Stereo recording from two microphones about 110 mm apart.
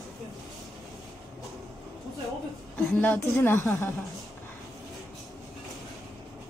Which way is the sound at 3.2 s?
25° left (ahead or behind).